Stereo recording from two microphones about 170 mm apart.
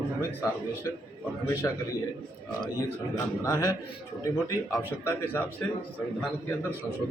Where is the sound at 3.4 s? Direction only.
20° left (ahead or behind).